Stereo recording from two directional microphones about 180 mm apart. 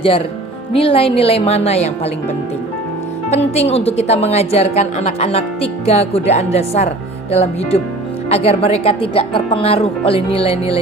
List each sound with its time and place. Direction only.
0.7 s speech: 30° left (ahead or behind)
3.2 s speech: 35° left (ahead or behind)